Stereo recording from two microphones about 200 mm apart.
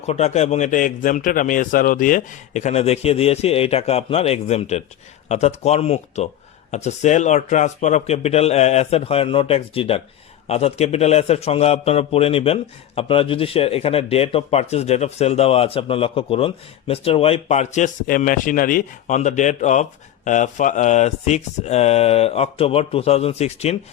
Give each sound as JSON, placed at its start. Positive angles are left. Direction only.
{"t": 0.0, "sound": "a man's voice", "side_deg": 35}